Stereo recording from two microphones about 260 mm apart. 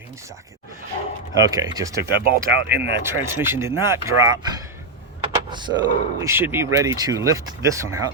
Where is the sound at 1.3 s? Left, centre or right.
Centre.